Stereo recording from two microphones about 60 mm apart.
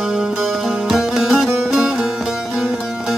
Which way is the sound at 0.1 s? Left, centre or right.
Centre.